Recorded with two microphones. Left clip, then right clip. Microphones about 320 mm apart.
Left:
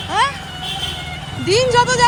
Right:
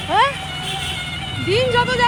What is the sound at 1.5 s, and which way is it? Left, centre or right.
Speech, centre.